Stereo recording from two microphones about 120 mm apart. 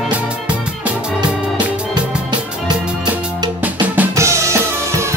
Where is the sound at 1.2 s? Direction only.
35° right (ahead or behind).